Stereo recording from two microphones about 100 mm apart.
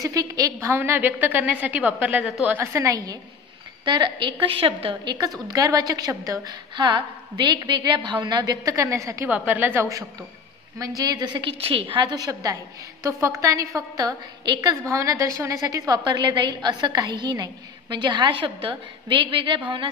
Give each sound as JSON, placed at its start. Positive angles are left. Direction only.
{"t": 0.0, "sound": "a woman's voice", "side_deg": -35}
{"t": 2.2, "sound": "a woman's voice", "side_deg": -5}
{"t": 2.5, "sound": "a woman's voice", "side_deg": -25}
{"t": 3.8, "sound": "a woman's voice", "side_deg": -50}
{"t": 5.5, "sound": "a woman's voice", "side_deg": -40}
{"t": 9.3, "sound": "a woman's voice", "side_deg": -15}
{"t": 11.0, "sound": "a woman's voice", "side_deg": -40}
{"t": 11.6, "sound": "a woman's voice", "side_deg": -65}
{"t": 16.0, "sound": "a woman's voice", "side_deg": -50}